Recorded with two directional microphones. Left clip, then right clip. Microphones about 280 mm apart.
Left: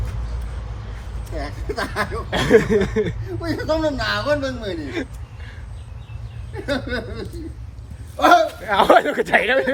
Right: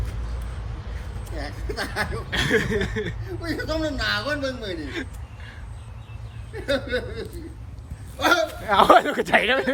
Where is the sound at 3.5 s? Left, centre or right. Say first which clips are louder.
Left 6 dB; centre.